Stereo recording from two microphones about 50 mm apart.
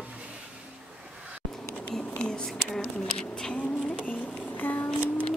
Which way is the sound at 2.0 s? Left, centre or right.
Left.